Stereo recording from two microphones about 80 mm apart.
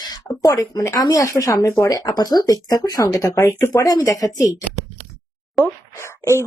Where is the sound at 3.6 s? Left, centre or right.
Left.